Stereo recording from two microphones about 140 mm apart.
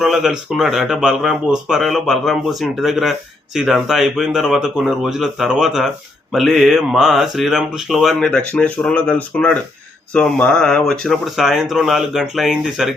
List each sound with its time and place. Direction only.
0.0 s speech: 5° right (ahead or behind)